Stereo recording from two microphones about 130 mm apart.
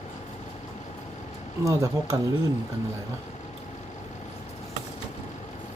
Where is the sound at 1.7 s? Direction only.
25° right (ahead or behind).